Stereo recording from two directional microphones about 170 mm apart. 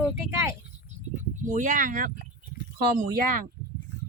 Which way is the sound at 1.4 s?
50° right (ahead or behind).